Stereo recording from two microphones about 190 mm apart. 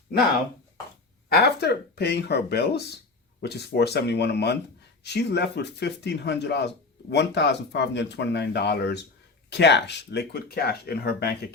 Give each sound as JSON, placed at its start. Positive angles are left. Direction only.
{"t": 1.3, "sound": "speech", "side_deg": 55}